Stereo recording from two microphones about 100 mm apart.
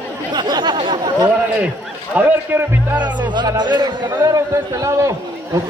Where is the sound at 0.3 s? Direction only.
45° right (ahead or behind).